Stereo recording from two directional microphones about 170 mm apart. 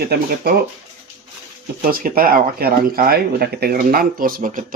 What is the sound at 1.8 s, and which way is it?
Speech, 60° right (ahead or behind).